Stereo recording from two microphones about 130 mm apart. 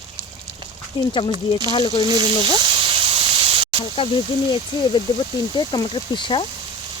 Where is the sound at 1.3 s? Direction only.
30° right (ahead or behind).